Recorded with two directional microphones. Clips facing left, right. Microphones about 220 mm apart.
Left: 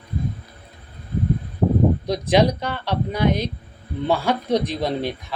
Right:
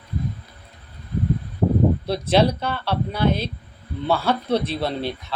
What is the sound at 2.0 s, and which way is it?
Speech, 15° left (ahead or behind).